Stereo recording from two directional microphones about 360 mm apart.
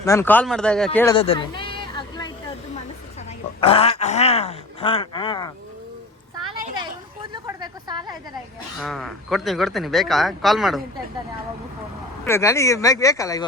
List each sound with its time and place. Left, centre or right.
0.0 s a man's voice: centre
0.9 s a sound: centre
3.2 s speech: centre
6.6 s a sound: centre
8.8 s a man's voice: centre
12.2 s speech: centre